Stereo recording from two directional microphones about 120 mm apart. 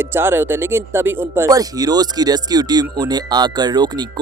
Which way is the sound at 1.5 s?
30° right (ahead or behind).